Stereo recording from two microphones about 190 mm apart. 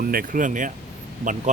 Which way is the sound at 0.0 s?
50° right (ahead or behind).